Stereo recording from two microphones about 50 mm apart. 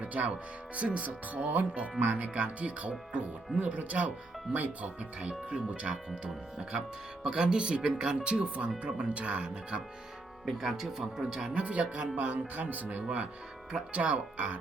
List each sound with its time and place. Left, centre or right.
0.0 s speech: right
10.6 s speech: centre
11.5 s speech: right